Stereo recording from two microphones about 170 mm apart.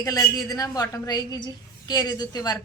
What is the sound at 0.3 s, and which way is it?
A woman's voice, 20° left (ahead or behind).